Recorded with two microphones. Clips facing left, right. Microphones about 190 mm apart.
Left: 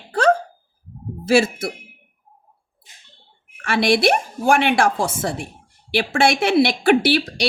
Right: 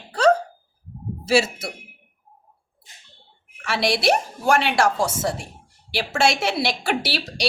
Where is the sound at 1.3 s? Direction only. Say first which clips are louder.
Left 3 dB; 50° left (ahead or behind).